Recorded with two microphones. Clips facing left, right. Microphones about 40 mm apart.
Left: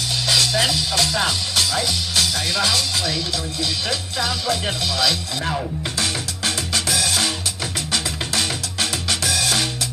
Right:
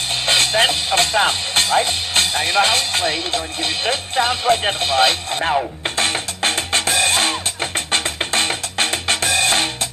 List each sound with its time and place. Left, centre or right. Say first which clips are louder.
0.3 s speech: right 4 dB; right
5.9 s music: right 6 dB; right